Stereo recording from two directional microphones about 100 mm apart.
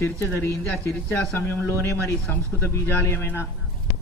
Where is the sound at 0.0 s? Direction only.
25° left (ahead or behind).